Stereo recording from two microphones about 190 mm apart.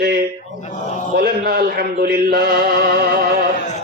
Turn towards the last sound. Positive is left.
turn(degrees=40)  # may be behind; listen again after turning